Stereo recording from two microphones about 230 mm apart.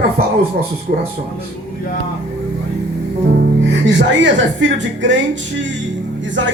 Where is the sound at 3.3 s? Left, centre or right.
Right.